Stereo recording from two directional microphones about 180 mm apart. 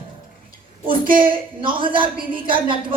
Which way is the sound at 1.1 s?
30° right (ahead or behind).